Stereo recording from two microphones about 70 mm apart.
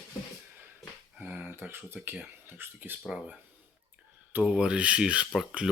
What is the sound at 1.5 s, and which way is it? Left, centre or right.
Speech, right.